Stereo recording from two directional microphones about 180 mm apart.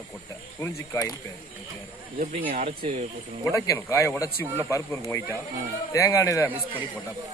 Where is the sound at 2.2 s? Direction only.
40° right (ahead or behind).